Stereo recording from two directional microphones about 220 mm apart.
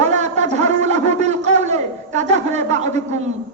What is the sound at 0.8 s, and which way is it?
A woman's voice, 30° right (ahead or behind).